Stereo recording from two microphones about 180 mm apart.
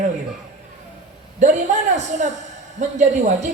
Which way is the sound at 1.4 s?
40° right (ahead or behind).